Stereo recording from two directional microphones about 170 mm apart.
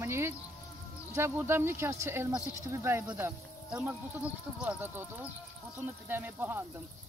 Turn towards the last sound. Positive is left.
turn(degrees=-10)  # may be behind; listen again after turning